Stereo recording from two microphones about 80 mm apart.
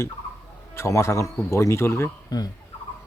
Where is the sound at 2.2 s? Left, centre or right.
Left.